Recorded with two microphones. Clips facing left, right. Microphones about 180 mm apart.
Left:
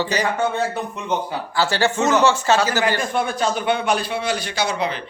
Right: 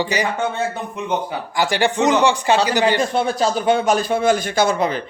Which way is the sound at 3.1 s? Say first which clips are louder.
Right 3 dB; 35° right (ahead or behind).